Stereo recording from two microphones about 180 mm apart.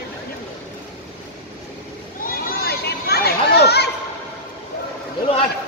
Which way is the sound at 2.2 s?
55° left (ahead or behind).